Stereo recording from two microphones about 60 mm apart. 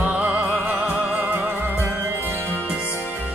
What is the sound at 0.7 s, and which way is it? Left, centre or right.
Music, centre.